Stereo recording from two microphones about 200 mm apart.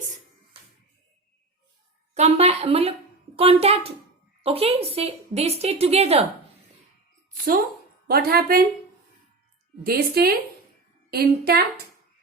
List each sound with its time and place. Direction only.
2.1 s a child's voice: 30° right (ahead or behind)
8.0 s speech: 50° right (ahead or behind)
9.8 s speech: 50° right (ahead or behind)